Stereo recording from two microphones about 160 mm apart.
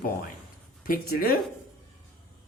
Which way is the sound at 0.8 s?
65° left (ahead or behind).